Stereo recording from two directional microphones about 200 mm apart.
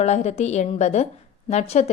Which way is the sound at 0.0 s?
35° left (ahead or behind).